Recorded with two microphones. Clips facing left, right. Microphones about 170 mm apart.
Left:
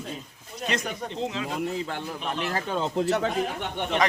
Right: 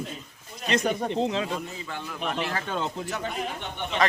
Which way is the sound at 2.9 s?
70° left (ahead or behind).